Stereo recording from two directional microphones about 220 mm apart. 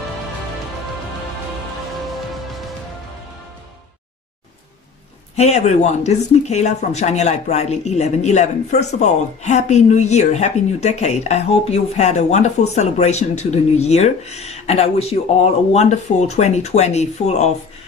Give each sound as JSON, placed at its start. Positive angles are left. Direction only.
{"t": 5.4, "sound": "speech", "side_deg": 30}